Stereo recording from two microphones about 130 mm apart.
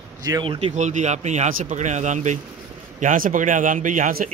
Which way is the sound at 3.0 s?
90° right.